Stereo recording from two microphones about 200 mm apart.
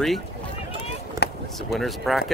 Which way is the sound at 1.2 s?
55° left (ahead or behind).